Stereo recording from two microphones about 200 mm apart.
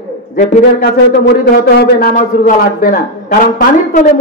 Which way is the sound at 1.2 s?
55° left (ahead or behind).